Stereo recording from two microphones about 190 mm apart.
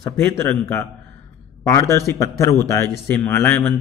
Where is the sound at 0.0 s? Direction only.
15° left (ahead or behind).